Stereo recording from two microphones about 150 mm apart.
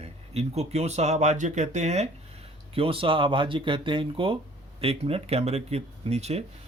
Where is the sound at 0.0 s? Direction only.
45° right (ahead or behind).